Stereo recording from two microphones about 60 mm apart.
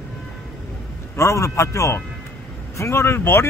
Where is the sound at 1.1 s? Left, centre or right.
Left.